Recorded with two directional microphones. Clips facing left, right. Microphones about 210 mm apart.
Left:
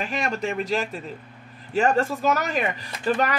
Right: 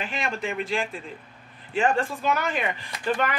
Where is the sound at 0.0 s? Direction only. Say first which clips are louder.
Left 3 dB; 40° left (ahead or behind).